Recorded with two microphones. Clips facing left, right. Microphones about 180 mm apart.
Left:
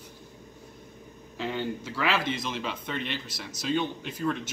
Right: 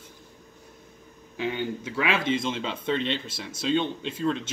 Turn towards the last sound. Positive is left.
turn(degrees=-25)  # may be behind; listen again after turning